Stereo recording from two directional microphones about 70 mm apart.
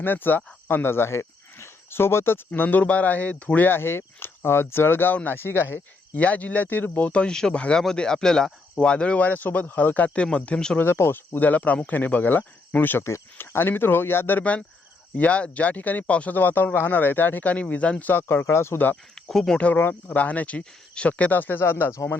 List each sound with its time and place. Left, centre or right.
0.0 s speech: left
2.5 s speech: left
6.1 s speech: left
7.1 s speech: centre
10.8 s speech: left
11.3 s speech: left
13.1 s speech: left; by 18.1 s centre
18.1 s speech: left
19.1 s speech: centre; by 22.2 s left